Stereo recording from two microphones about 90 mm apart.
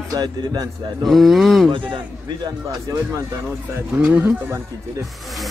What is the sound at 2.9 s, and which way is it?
Speech, 45° right (ahead or behind).